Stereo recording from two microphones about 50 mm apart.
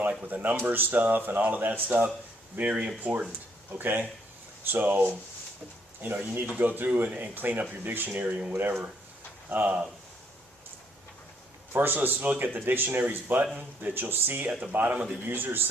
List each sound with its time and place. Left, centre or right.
0.0 s speech: right
2.6 s speech: right
6.0 s speech: right
8.2 s speech: right
8.5 s speech: right
9.5 s speech: right
11.7 s speech: right